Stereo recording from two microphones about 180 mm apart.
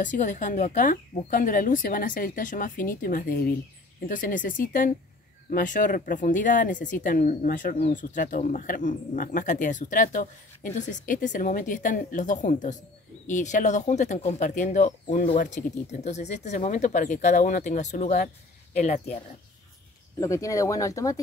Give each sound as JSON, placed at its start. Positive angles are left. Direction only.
{"t": 0.0, "sound": "speech", "side_deg": 45}
{"t": 20.2, "sound": "speech", "side_deg": 15}